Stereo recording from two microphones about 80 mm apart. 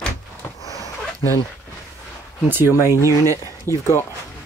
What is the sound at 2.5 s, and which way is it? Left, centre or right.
Speech, right.